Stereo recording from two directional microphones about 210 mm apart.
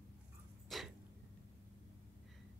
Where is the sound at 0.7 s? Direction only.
Centre (ahead or behind).